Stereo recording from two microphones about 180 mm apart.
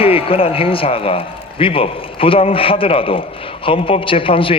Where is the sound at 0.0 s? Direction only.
30° left (ahead or behind).